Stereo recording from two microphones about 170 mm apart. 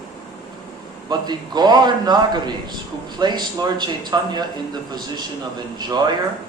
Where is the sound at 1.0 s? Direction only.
25° right (ahead or behind).